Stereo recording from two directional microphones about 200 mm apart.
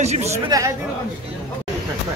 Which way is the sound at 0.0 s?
35° right (ahead or behind).